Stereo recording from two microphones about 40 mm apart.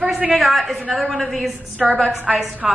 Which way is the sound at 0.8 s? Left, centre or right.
Right.